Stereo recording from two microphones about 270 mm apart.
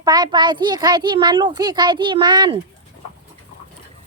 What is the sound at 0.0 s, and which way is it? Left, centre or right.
A child's voice, centre.